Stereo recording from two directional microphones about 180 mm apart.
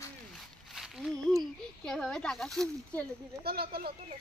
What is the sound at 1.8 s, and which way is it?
Speech, centre (ahead or behind).